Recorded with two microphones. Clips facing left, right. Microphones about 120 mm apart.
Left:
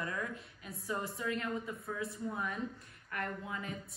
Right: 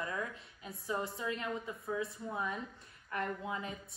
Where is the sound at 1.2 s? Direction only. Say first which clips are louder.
Left 1 dB; 25° right (ahead or behind).